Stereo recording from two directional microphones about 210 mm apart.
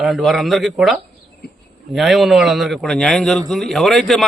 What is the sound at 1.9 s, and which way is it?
A man's voice, centre (ahead or behind).